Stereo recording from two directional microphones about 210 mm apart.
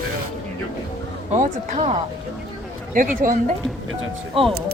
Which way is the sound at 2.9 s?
40° right (ahead or behind).